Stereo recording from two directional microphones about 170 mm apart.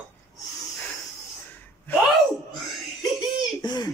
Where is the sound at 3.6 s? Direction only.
25° left (ahead or behind).